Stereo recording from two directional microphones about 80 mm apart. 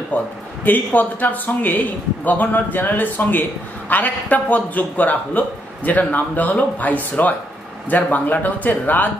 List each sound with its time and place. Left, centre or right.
0.1 s a man's voice: left